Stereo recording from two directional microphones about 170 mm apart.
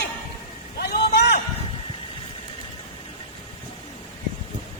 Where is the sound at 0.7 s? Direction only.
70° left (ahead or behind).